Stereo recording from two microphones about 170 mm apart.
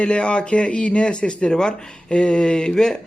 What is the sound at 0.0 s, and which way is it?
Speech, 5° left (ahead or behind).